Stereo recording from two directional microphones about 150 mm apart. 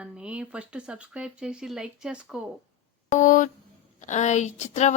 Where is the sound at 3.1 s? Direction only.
60° left (ahead or behind).